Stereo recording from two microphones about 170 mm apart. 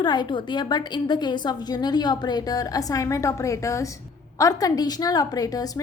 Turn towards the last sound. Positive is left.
turn(degrees=20)  # may be behind; listen again after turning